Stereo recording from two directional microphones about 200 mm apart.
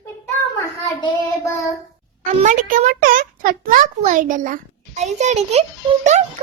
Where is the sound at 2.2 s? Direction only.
40° right (ahead or behind).